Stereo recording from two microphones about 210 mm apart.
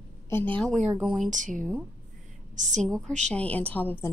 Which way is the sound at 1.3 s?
35° right (ahead or behind).